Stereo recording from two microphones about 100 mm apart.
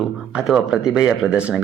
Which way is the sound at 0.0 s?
5° right (ahead or behind).